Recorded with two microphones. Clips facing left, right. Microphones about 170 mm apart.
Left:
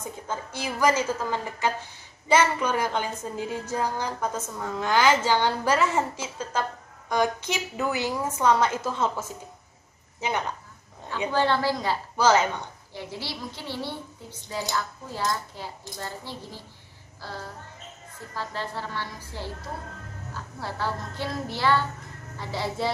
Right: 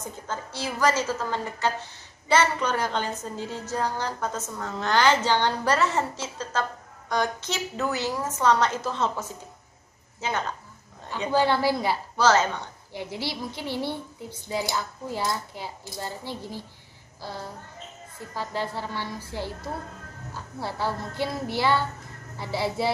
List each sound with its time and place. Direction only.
0.0 s a woman's voice: 10° left (ahead or behind)
11.3 s speech: 10° right (ahead or behind)
12.2 s a woman's voice: 10° left (ahead or behind)
12.9 s speech: 15° right (ahead or behind)
18.3 s speech: 15° right (ahead or behind)
20.6 s speech: 15° right (ahead or behind)